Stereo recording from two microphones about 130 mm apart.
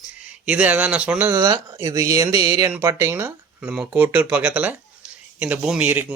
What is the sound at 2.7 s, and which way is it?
Speech, 15° right (ahead or behind).